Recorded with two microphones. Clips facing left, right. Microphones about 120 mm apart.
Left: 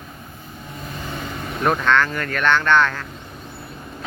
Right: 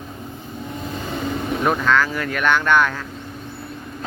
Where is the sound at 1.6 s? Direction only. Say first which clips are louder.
Left 1 dB; 5° right (ahead or behind).